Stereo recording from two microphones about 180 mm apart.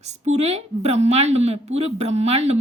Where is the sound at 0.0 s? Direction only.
40° right (ahead or behind).